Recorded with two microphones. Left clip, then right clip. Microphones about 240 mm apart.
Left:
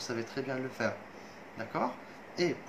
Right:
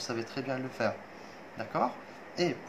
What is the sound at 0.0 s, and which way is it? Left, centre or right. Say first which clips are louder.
Speech: right 1 dB; centre.